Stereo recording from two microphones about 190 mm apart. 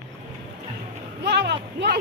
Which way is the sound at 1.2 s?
60° right (ahead or behind).